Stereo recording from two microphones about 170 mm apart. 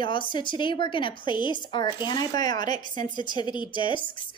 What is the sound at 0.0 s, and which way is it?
A woman's voice, 30° left (ahead or behind).